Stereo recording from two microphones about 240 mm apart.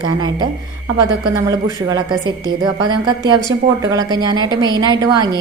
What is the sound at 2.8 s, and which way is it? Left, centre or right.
A woman's voice, centre.